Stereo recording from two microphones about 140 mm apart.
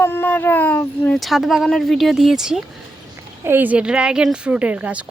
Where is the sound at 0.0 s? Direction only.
15° left (ahead or behind).